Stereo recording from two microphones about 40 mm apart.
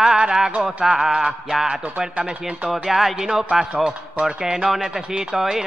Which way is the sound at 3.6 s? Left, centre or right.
Right.